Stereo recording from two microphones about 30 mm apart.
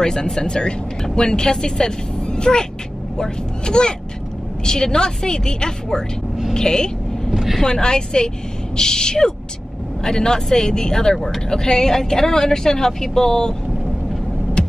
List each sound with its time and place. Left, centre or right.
0.0 s speech: left